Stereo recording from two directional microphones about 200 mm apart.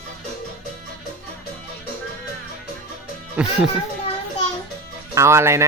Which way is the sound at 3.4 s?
5° right (ahead or behind).